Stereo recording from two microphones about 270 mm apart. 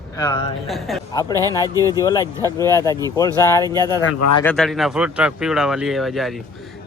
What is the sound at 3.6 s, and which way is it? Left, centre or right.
Speech, centre.